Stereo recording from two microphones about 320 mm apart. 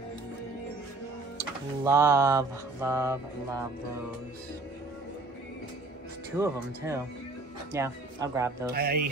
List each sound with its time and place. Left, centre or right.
1.9 s music: centre
6.3 s music: centre
8.7 s speech: right